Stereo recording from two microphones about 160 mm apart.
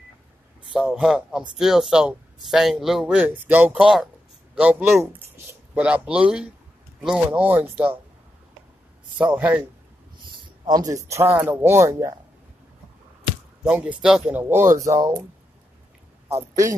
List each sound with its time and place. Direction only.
0.7 s speech: 5° right (ahead or behind)
9.2 s speech: 10° right (ahead or behind)
10.4 s speech: 25° right (ahead or behind)
13.7 s speech: 10° right (ahead or behind)
14.7 s speech: 20° right (ahead or behind)